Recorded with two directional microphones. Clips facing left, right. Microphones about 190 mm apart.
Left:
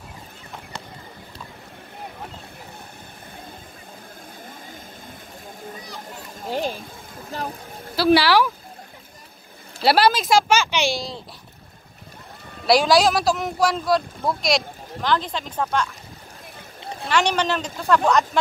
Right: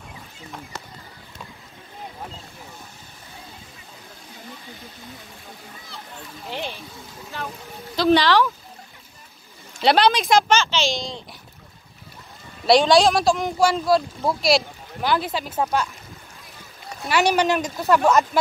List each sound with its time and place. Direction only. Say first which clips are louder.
4.5 s vehicle: even; 50° left (ahead or behind)
6.3 s a sound: left 6 dB; 45° left (ahead or behind)
7.9 s speech: left 1 dB; 5° left (ahead or behind)
9.8 s speech: even; 5° left (ahead or behind)
12.6 s speech: right 1 dB; centre (ahead or behind)
17.1 s speech: right 2 dB; 10° right (ahead or behind)